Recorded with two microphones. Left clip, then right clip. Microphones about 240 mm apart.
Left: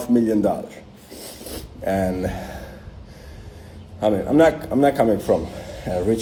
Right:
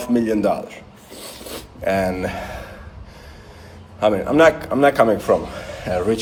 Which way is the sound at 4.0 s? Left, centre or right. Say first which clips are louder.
Right 2 dB; right.